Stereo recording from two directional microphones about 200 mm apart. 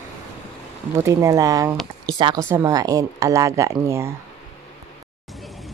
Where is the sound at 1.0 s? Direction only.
15° right (ahead or behind).